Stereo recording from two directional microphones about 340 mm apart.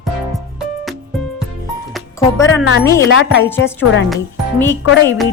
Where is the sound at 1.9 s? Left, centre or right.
Centre.